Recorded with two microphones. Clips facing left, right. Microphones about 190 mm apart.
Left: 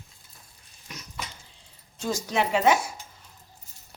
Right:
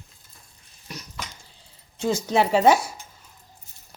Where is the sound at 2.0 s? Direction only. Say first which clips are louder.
Right 5 dB; 30° right (ahead or behind).